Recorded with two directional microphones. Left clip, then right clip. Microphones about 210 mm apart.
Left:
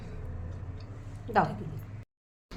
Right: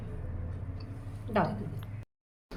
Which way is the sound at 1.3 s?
40° left (ahead or behind).